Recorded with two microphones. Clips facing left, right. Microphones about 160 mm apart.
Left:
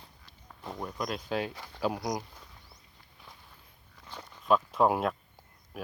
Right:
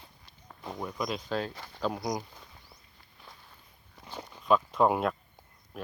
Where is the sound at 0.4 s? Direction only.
5° right (ahead or behind).